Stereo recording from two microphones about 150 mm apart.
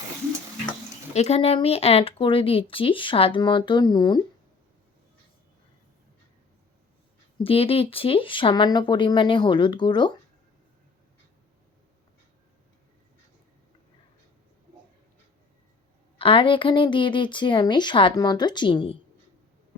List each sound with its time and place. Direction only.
1.1 s speech: 45° left (ahead or behind); by 4.2 s 30° left (ahead or behind)
7.3 s speech: 40° left (ahead or behind)
16.1 s speech: 35° left (ahead or behind)